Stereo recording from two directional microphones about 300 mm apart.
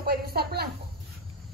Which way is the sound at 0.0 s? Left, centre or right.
Right.